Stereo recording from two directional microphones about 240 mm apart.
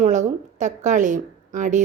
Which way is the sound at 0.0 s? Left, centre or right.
Right.